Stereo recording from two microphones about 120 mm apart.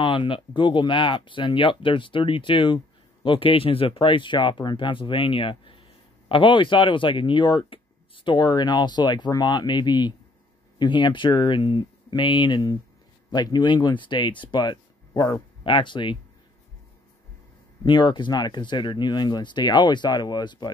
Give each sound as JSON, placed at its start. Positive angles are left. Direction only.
{"t": 0.0, "sound": "speech", "side_deg": 45}
{"t": 15.6, "sound": "speech", "side_deg": 45}
{"t": 17.8, "sound": "speech", "side_deg": 40}